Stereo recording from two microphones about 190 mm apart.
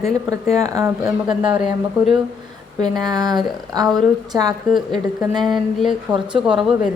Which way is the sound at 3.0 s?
20° right (ahead or behind).